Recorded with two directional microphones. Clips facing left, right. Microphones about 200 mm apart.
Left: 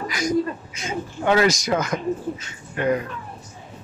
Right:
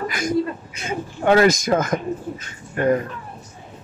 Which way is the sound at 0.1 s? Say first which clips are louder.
Left 4 dB; 55° right (ahead or behind).